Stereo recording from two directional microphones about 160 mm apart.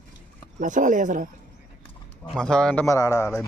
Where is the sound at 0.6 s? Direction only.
55° right (ahead or behind).